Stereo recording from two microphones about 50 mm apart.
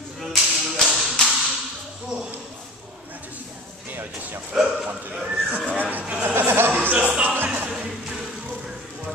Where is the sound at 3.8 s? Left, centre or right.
Right.